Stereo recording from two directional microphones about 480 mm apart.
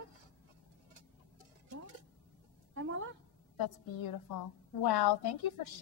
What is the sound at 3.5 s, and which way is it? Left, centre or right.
A woman's voice, left.